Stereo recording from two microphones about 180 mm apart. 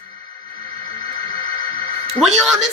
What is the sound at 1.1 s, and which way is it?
Music, 25° left (ahead or behind).